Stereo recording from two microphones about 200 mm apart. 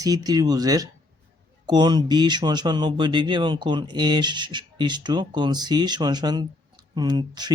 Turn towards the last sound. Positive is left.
turn(degrees=-20)  # may be behind; listen again after turning